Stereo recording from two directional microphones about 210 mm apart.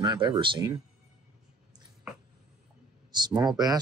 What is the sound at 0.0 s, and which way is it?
Speech, 20° right (ahead or behind).